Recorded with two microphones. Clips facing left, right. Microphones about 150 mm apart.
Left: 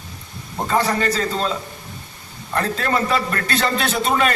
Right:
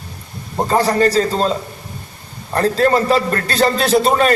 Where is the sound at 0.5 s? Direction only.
35° right (ahead or behind).